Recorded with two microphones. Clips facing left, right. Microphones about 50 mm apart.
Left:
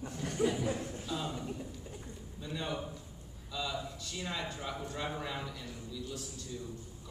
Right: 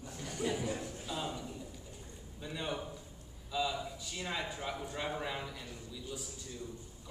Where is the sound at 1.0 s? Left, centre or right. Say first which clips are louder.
Left 1 dB; centre.